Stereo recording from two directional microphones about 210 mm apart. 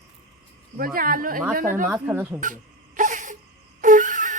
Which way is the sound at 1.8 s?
5° right (ahead or behind).